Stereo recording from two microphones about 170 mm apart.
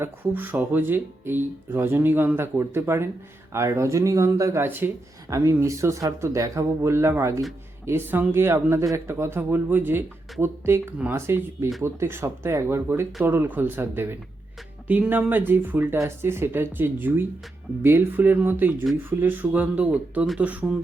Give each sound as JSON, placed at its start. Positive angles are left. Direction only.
{"t": 0.0, "sound": "speech", "side_deg": -10}